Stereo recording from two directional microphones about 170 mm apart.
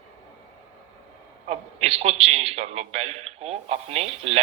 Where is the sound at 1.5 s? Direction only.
35° right (ahead or behind).